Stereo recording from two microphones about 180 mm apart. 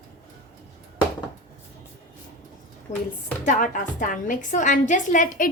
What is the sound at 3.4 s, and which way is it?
A woman's voice, 45° left (ahead or behind).